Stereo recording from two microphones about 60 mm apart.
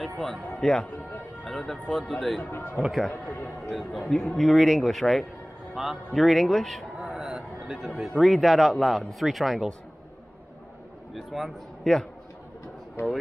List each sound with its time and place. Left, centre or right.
0.0 s speech: centre
2.5 s speech: left
2.8 s a man's voice: centre
3.1 s a man's voice: left
4.1 s a man's voice: centre
7.0 s a sound: centre
8.2 s a man's voice: centre
11.1 s a man's voice: centre
13.0 s speech: left